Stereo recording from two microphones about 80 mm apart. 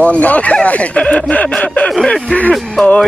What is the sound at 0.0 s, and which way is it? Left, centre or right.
Speech, centre.